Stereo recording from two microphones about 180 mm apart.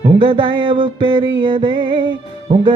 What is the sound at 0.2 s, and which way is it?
Music, 30° right (ahead or behind).